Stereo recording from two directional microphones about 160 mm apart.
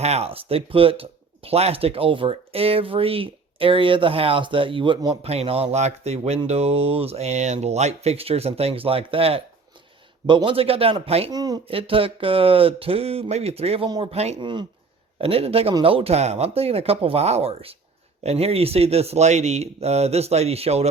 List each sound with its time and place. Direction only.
0.0 s speech: 40° right (ahead or behind)
11.3 s speech: 25° right (ahead or behind)
11.7 s speech: 35° right (ahead or behind)